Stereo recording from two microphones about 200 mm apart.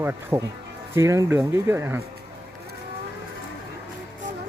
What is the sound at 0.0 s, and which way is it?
Speech, 10° right (ahead or behind).